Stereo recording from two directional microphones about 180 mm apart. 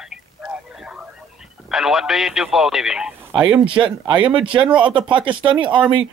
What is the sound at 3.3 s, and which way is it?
Speech, 25° right (ahead or behind).